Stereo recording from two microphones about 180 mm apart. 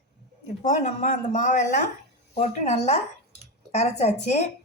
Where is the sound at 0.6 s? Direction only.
40° left (ahead or behind).